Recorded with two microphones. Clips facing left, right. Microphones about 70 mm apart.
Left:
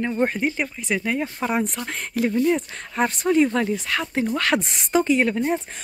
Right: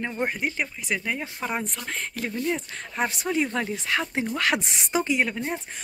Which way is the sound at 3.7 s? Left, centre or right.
Right.